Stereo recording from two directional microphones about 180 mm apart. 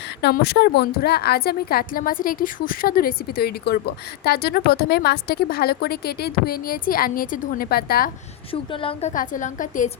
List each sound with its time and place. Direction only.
0.2 s a woman's voice: 65° left (ahead or behind)
8.7 s a woman's voice: 30° left (ahead or behind)